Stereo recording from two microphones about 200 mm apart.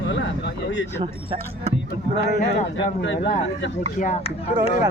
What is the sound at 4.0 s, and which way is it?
Speech, 35° left (ahead or behind).